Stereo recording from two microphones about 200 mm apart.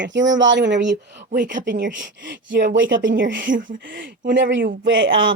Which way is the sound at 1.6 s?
60° right (ahead or behind).